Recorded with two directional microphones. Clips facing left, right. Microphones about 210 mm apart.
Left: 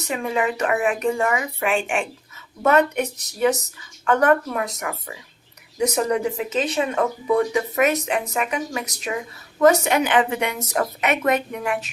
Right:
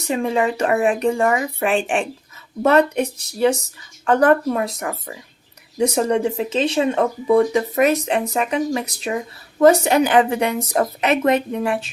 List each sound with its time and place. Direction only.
0.1 s speech: 30° right (ahead or behind)